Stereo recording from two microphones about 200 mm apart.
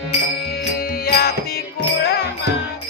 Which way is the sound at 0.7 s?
50° left (ahead or behind).